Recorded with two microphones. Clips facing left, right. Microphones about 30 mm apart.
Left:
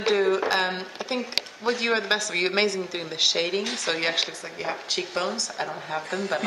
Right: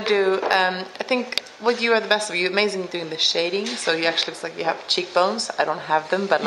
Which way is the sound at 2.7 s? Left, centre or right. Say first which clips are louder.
Right 3 dB; right.